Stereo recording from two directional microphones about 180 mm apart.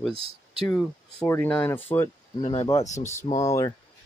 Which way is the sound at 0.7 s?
10° left (ahead or behind).